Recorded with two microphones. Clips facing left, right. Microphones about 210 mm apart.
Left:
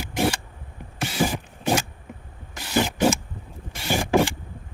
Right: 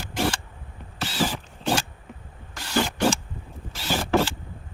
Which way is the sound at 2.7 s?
10° left (ahead or behind).